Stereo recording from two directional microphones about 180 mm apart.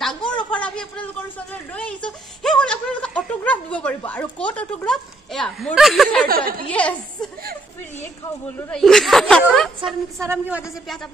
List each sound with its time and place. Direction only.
0.4 s a sound: 5° left (ahead or behind)
2.0 s snicker: 5° left (ahead or behind)
6.2 s a woman's voice: 55° right (ahead or behind)
6.7 s a woman's voice: 5° left (ahead or behind)
8.5 s speech: 5° left (ahead or behind)
10.1 s a woman's voice: 15° right (ahead or behind)